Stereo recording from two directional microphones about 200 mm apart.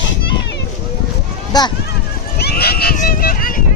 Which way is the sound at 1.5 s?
20° left (ahead or behind).